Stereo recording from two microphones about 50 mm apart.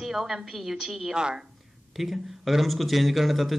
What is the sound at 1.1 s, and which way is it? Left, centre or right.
Speech, centre.